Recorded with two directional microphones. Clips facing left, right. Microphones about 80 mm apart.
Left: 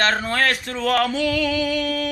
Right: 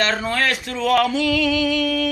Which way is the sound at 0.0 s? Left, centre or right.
Left.